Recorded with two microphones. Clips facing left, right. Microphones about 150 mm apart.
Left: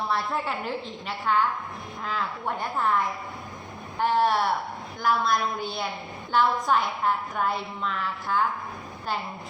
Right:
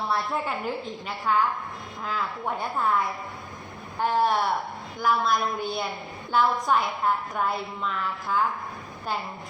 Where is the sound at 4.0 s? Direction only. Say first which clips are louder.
Left 1 dB; 10° right (ahead or behind).